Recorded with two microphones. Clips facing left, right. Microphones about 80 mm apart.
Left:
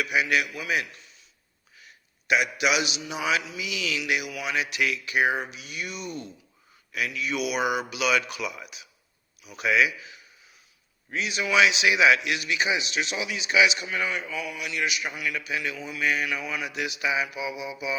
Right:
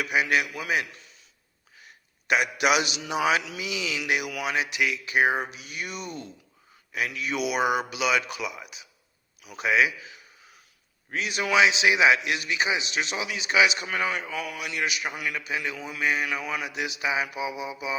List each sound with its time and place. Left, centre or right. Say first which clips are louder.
0.0 s a man's voice: even; right
2.2 s a man's voice: right 1 dB; right
3.6 s speech: even; right
4.3 s a man's voice: right 2 dB; right
4.5 s a man's voice: left 1 dB; right
9.4 s a man's voice: right 2 dB; right
9.6 s speech: even; right
11.1 s a man's voice: even; right
11.5 s a man's voice: right 1 dB; right
16.4 s a man's voice: right 1 dB; right
16.6 s speech: even; right